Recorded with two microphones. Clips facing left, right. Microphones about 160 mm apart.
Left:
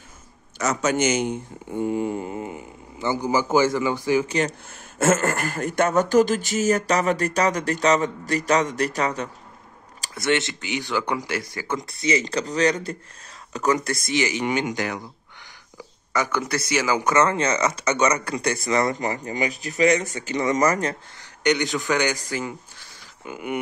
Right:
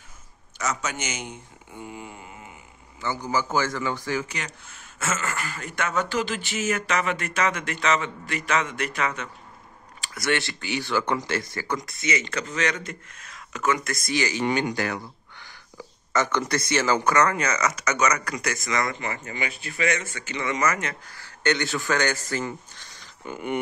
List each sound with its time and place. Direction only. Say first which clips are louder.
0.6 s a man's voice: left 8 dB; 35° left (ahead or behind)
3.0 s speech: left 4 dB; 15° left (ahead or behind)
4.3 s speech: left 12 dB; 30° left (ahead or behind)
4.6 s speech: left 9 dB; 45° left (ahead or behind)
10.1 s speech: left 3 dB; 20° left (ahead or behind)
16.1 s speech: even; 10° left (ahead or behind)
17.1 s speech: left 2 dB; 25° left (ahead or behind)
21.2 s speech: left 3 dB; 15° left (ahead or behind)